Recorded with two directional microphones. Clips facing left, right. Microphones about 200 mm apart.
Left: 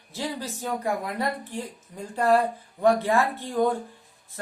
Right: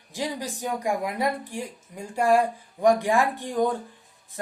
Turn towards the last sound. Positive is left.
turn(degrees=-15)  # may be behind; listen again after turning